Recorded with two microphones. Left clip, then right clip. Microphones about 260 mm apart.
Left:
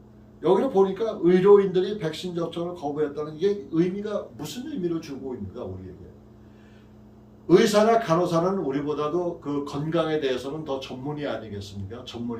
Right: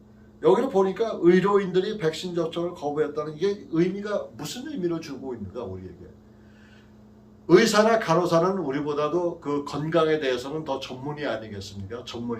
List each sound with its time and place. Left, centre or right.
0.4 s a man's voice: centre
7.4 s a man's voice: centre